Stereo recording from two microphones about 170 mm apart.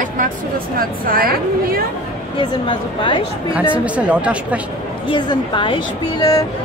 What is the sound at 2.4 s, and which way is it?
Speech, 30° left (ahead or behind).